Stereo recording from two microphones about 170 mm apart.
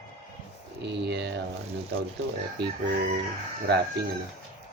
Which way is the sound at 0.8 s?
90° right.